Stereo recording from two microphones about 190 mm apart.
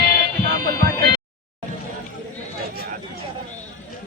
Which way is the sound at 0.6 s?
50° right (ahead or behind).